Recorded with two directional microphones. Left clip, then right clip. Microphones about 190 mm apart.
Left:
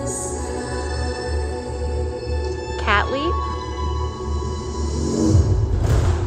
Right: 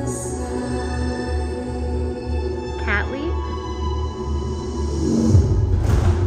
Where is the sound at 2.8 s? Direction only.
15° left (ahead or behind).